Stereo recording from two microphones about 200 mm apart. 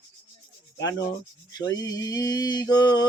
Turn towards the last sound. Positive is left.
turn(degrees=20)  # may be behind; listen again after turning